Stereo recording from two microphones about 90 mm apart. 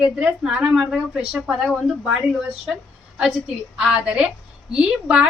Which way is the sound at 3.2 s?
5° right (ahead or behind).